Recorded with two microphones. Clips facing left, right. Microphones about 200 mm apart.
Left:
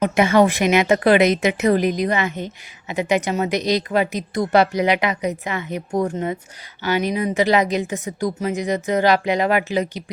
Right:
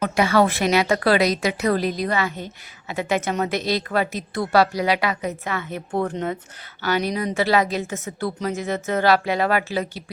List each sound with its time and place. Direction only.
0.0 s a woman's voice: 20° left (ahead or behind)